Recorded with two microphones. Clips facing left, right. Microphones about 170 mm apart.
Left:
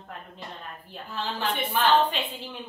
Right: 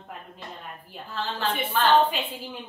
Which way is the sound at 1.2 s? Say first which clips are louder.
Right 1 dB; 15° left (ahead or behind).